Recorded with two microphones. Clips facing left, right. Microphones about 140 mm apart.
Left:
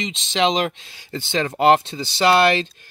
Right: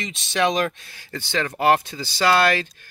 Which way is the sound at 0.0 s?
20° left (ahead or behind).